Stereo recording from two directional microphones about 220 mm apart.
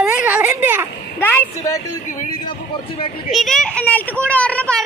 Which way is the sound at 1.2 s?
10° left (ahead or behind).